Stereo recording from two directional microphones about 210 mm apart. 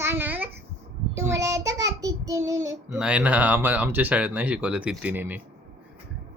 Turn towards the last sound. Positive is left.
turn(degrees=-10)  # may be behind; listen again after turning